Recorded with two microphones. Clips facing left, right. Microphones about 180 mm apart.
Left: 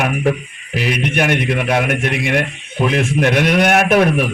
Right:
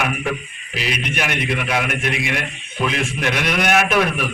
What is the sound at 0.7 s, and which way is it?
A man's voice, 55° left (ahead or behind).